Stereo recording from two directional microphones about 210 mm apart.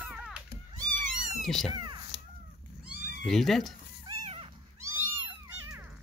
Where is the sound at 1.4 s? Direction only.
Centre (ahead or behind).